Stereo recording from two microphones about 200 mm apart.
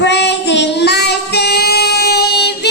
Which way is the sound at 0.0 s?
60° left (ahead or behind).